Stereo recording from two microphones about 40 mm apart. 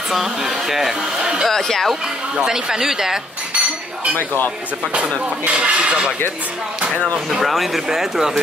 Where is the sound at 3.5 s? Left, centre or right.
Right.